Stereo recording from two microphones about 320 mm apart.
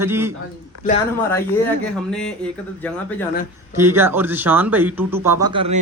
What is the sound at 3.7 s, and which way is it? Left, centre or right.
Speech, centre.